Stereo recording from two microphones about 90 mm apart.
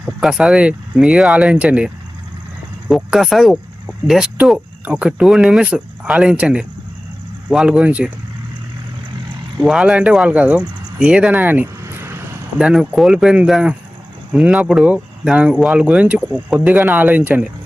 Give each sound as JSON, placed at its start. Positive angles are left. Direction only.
{"t": 0.0, "sound": "speech", "side_deg": -5}
{"t": 2.9, "sound": "speech", "side_deg": 0}
{"t": 9.6, "sound": "speech", "side_deg": -5}
{"t": 12.5, "sound": "speech", "side_deg": -10}